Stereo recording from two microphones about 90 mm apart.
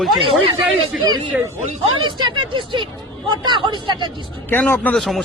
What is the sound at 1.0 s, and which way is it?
Speech, 55° right (ahead or behind).